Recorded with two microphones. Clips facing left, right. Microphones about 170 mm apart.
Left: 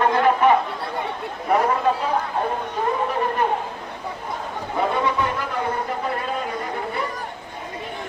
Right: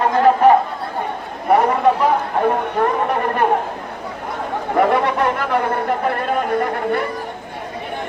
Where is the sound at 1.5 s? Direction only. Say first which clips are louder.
Right 5 dB; 70° right (ahead or behind).